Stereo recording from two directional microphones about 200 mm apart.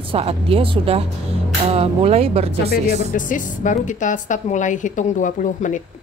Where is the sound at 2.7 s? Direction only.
45° left (ahead or behind).